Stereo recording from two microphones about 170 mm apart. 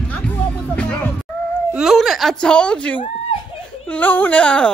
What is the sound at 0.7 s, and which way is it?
Music, 10° left (ahead or behind).